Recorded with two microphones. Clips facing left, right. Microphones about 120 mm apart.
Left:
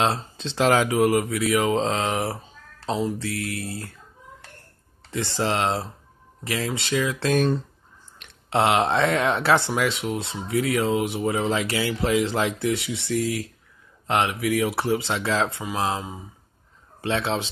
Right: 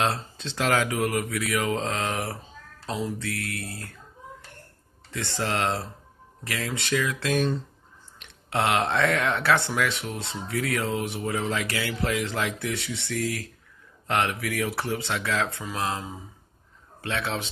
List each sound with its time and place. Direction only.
0.0 s speech: 20° left (ahead or behind)
5.1 s speech: 20° left (ahead or behind)
7.2 s speech: 45° left (ahead or behind)
8.5 s speech: 20° left (ahead or behind)
17.0 s speech: 25° left (ahead or behind)